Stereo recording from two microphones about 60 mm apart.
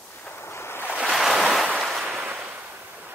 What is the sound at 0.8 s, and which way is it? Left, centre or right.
Waves, right.